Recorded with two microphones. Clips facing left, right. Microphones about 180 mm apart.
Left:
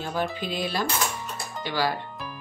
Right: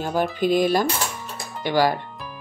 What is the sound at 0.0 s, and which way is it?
Speech, 45° right (ahead or behind).